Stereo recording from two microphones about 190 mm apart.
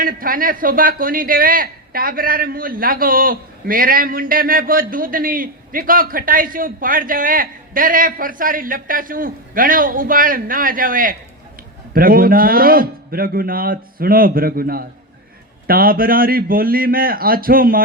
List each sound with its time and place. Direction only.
0.0 s speech: 50° right (ahead or behind)